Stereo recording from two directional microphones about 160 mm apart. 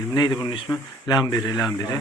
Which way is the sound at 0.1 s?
25° left (ahead or behind).